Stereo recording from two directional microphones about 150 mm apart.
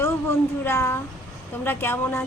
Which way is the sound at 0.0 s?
15° left (ahead or behind).